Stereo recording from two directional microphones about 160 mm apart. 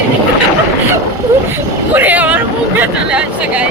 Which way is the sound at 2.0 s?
10° right (ahead or behind).